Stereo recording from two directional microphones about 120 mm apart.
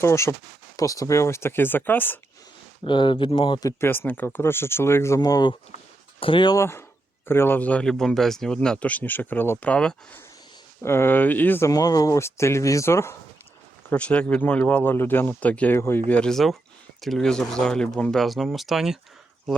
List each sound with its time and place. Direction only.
0.0 s speech: 25° left (ahead or behind)
2.8 s speech: 45° left (ahead or behind)
3.6 s speech: 20° left (ahead or behind)
6.1 s speech: 45° left (ahead or behind)
6.6 s speech: 20° left (ahead or behind)
11.7 s speech: 30° left (ahead or behind)
13.9 s speech: 10° left (ahead or behind)
16.0 s speech: 10° left (ahead or behind)